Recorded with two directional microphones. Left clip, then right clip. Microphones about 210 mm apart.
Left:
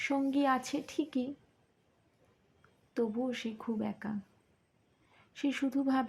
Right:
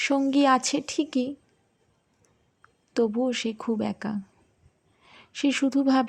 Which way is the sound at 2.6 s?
40° right (ahead or behind).